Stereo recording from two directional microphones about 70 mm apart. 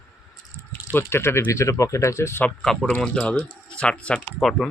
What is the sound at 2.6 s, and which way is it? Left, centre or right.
Speech, centre.